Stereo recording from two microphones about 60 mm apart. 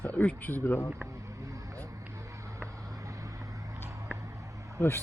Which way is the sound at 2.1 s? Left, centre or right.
Right.